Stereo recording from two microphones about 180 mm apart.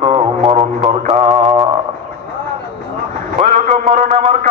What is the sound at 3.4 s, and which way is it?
A man's voice, 40° right (ahead or behind).